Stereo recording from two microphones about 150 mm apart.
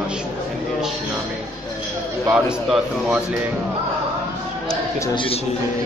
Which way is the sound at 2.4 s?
5° right (ahead or behind).